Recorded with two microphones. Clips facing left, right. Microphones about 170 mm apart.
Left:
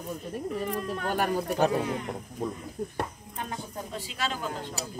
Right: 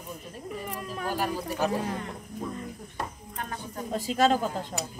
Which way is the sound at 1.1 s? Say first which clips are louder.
Left 3 dB; 60° left (ahead or behind).